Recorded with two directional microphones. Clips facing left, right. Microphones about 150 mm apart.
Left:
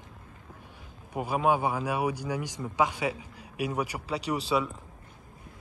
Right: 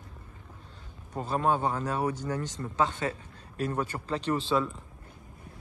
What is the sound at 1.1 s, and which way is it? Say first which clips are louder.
Speech: left 2 dB; 10° left (ahead or behind).